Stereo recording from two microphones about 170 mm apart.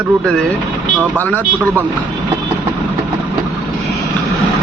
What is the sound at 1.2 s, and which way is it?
Speech, 10° left (ahead or behind).